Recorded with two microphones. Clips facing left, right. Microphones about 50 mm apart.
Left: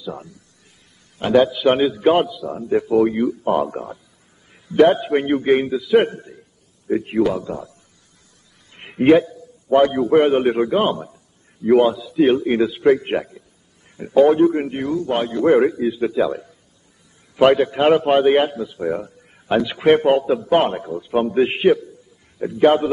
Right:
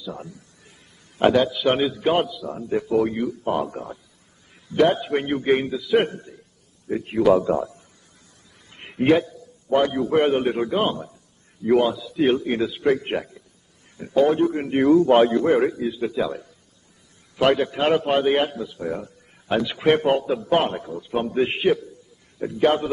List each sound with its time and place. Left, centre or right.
1.3 s a man's voice: centre
7.3 s a man's voice: right
8.7 s a man's voice: centre
14.7 s a man's voice: right
15.4 s a man's voice: centre